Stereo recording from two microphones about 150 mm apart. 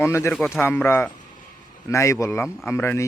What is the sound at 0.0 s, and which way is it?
Speech, 15° left (ahead or behind).